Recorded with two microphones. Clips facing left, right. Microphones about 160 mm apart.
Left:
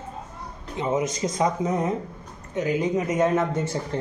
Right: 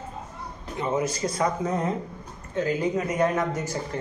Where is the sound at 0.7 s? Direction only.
20° left (ahead or behind).